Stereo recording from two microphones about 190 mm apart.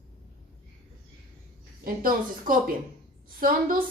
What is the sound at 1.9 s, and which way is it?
A woman's voice, 45° right (ahead or behind).